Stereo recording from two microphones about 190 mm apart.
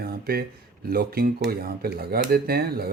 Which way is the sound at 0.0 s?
50° right (ahead or behind).